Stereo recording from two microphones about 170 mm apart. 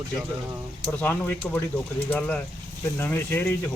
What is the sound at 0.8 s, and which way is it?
Speech, 10° left (ahead or behind).